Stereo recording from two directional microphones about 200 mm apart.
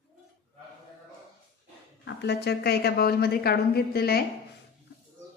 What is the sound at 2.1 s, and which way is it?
A woman's voice, 55° left (ahead or behind).